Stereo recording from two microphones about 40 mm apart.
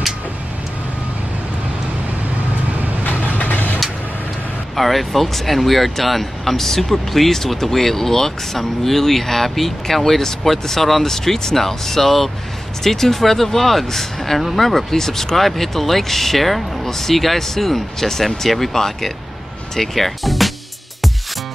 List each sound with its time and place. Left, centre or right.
3.1 s vehicle: left
4.7 s speech: centre